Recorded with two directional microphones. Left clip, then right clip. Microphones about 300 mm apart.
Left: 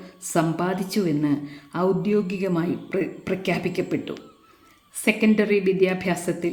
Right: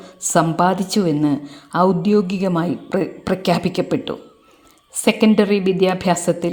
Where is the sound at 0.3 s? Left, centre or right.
Right.